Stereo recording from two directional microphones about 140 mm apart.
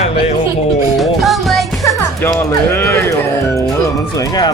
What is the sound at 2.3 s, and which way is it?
Speech, 15° left (ahead or behind).